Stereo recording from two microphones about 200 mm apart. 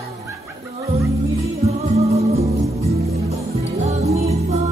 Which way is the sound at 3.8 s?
35° right (ahead or behind).